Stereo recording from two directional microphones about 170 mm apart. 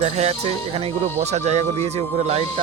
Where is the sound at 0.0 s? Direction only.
35° right (ahead or behind).